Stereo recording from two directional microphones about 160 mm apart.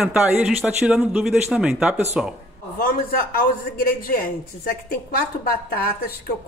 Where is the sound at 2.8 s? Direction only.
65° left (ahead or behind).